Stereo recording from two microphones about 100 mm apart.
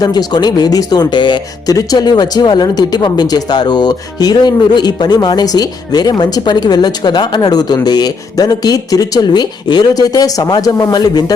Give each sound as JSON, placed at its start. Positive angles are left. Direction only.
{"t": 0.0, "sound": "speech", "side_deg": 40}
{"t": 1.7, "sound": "speech", "side_deg": 40}